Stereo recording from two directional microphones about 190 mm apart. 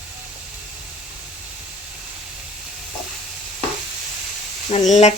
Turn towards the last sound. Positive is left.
turn(degrees=35)  # may be behind; listen again after turning